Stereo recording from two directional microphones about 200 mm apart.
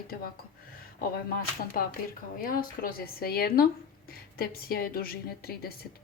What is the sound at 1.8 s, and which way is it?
A woman's voice, 45° left (ahead or behind).